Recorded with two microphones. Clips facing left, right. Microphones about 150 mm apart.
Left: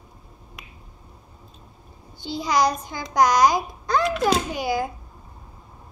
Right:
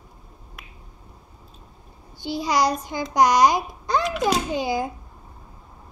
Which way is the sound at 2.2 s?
15° right (ahead or behind).